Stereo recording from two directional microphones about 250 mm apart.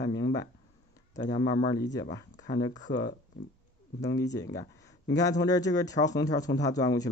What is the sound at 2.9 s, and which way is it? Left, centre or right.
Speech, left.